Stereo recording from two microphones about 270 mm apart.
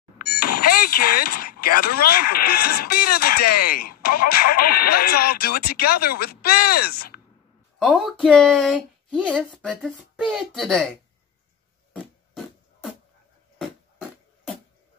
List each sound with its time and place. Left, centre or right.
0.2 s speech: left
7.8 s speech: centre